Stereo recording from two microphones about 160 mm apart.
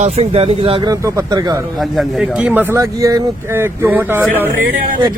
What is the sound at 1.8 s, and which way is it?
Speech, 5° right (ahead or behind).